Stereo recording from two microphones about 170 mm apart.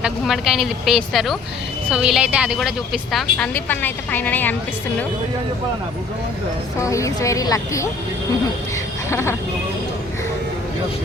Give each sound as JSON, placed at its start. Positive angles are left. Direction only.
{"t": 0.0, "sound": "a woman's voice", "side_deg": -5}
{"t": 6.7, "sound": "a woman's voice", "side_deg": 20}
{"t": 9.0, "sound": "a sound", "side_deg": 15}